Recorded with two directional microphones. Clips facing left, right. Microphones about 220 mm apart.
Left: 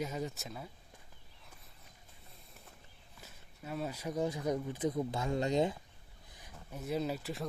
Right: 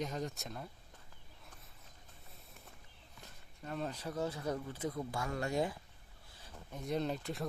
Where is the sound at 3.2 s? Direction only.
5° left (ahead or behind); by 5.8 s 20° left (ahead or behind).